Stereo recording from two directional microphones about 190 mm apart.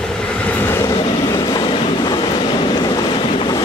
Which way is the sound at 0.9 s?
25° left (ahead or behind).